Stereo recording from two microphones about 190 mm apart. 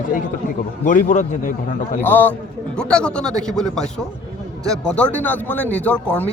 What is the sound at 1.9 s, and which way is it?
A man's voice, 10° left (ahead or behind).